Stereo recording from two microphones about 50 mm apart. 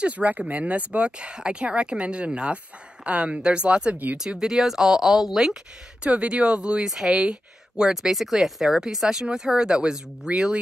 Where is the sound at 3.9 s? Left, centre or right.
Right.